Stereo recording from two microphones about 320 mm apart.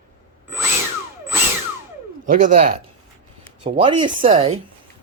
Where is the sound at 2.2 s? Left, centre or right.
Right.